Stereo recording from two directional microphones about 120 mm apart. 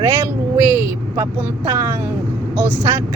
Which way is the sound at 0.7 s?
25° right (ahead or behind).